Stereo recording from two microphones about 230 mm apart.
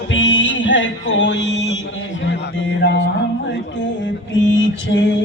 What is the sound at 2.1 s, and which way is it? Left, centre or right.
Speech, left.